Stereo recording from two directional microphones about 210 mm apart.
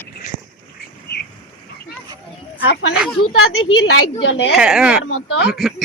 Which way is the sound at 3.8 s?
75° left (ahead or behind).